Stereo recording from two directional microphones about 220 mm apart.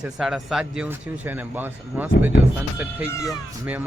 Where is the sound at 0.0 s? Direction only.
Centre (ahead or behind).